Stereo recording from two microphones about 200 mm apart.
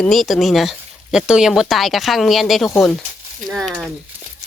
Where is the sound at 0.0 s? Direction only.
Centre (ahead or behind).